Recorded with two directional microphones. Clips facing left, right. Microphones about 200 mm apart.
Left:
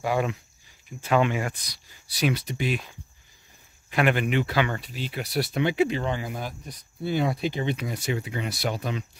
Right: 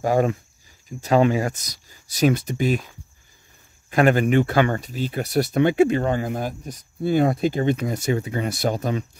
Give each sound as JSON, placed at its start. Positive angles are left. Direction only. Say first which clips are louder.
{"t": 0.0, "sound": "speech", "louder": "right 6 dB", "side_deg": -45}
{"t": 3.9, "sound": "speech", "louder": "right 6 dB", "side_deg": -40}